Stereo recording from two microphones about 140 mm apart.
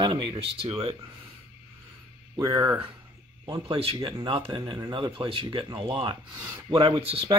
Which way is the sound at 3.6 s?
45° right (ahead or behind).